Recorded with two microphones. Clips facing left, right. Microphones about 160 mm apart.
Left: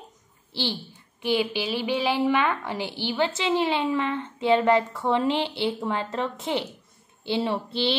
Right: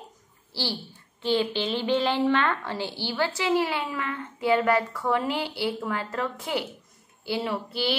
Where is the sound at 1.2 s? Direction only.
10° left (ahead or behind).